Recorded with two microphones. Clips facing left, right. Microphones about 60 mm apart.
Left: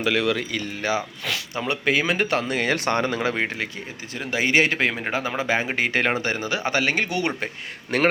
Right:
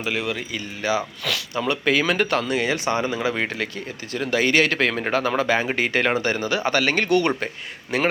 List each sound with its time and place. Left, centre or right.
0.0 s speech: left
0.8 s speech: left
3.3 s speech: left
7.9 s a man's voice: left